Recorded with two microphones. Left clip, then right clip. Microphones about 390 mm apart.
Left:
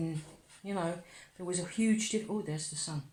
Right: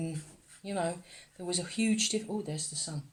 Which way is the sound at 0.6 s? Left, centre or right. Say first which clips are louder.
Right 2 dB; right.